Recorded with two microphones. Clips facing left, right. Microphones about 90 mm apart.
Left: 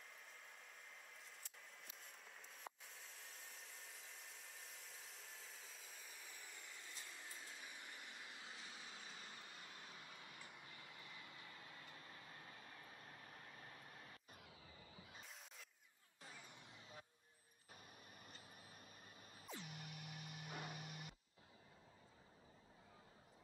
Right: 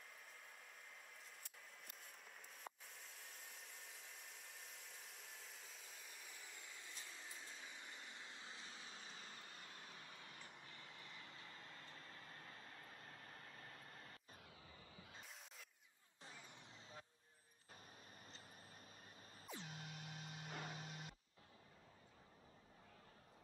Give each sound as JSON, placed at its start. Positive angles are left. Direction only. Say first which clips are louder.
{"t": 2.6, "sound": "a sound", "louder": "even", "side_deg": 0}
{"t": 7.3, "sound": "vehicle", "louder": "even", "side_deg": 10}
{"t": 19.5, "sound": "music", "louder": "right 1 dB", "side_deg": -25}
{"t": 20.4, "sound": "music", "louder": "even", "side_deg": 20}
{"t": 20.7, "sound": "music", "louder": "right 1 dB", "side_deg": -25}